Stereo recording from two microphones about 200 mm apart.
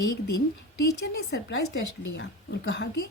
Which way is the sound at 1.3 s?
60° left (ahead or behind).